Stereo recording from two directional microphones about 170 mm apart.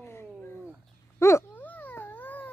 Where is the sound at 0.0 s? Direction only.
15° left (ahead or behind).